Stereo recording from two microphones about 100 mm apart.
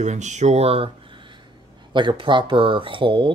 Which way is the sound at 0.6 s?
80° right.